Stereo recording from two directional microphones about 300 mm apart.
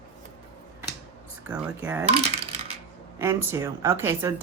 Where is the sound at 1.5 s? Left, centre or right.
Centre.